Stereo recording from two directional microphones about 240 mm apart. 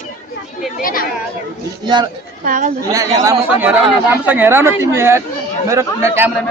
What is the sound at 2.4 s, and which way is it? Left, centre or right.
Speech, right.